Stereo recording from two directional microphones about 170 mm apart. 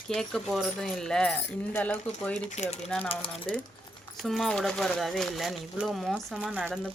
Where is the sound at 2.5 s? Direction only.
40° left (ahead or behind).